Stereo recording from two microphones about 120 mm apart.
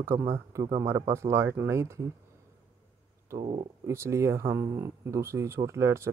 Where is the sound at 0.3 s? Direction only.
25° right (ahead or behind).